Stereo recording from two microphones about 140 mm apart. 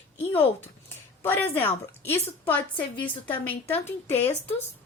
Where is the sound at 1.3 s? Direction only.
15° left (ahead or behind).